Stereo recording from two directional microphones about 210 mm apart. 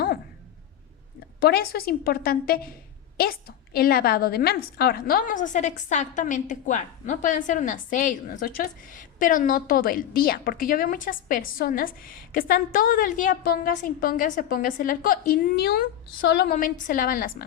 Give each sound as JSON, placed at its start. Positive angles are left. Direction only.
{"t": 1.4, "sound": "a woman's voice", "side_deg": 50}